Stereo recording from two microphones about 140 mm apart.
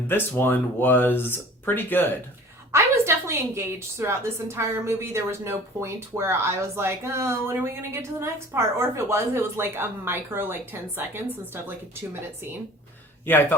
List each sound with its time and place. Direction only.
0.1 s speech: 15° left (ahead or behind)
2.7 s a woman's voice: 20° right (ahead or behind)
13.2 s speech: 15° left (ahead or behind)